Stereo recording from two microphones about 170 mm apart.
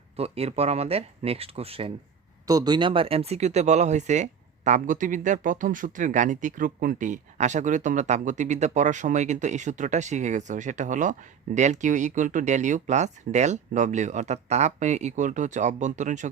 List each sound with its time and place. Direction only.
0.2 s speech: 35° right (ahead or behind)
2.5 s speech: 25° right (ahead or behind); by 16.3 s 45° right (ahead or behind)